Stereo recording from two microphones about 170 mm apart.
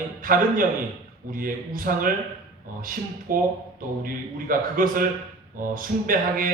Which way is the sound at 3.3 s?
55° right (ahead or behind).